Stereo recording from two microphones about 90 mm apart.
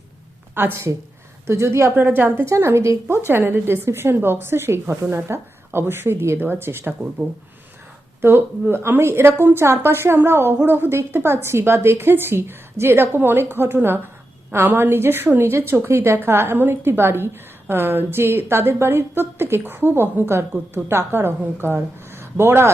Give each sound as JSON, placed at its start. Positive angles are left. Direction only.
{"t": 0.5, "sound": "a woman's voice", "side_deg": -25}
{"t": 2.0, "sound": "a woman's voice", "side_deg": -20}
{"t": 8.2, "sound": "a woman's voice", "side_deg": -25}